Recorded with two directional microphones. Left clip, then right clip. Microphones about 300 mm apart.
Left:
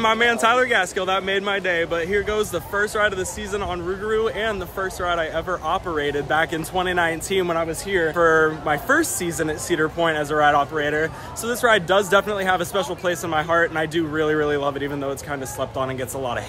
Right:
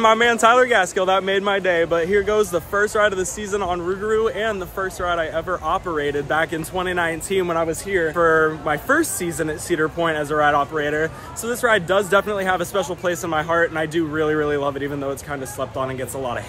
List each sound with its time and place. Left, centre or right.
0.0 s a man's voice: centre